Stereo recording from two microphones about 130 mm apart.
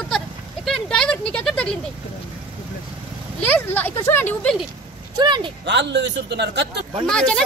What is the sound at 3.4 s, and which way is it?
Speech, 15° left (ahead or behind).